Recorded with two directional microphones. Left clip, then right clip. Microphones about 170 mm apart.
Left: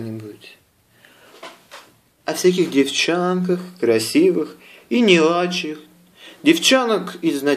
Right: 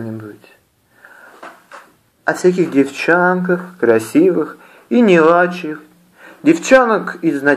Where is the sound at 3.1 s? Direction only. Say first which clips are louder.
Right 7 dB; 20° left (ahead or behind).